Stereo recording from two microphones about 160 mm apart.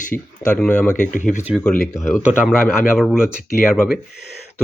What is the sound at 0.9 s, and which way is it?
Speech, 55° left (ahead or behind).